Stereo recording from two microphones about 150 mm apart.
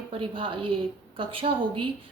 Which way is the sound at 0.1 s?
35° right (ahead or behind).